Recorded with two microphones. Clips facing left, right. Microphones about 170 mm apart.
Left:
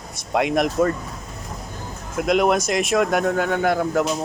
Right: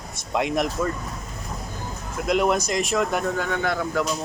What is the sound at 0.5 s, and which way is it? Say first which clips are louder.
Speech: left 8 dB; 65° left (ahead or behind).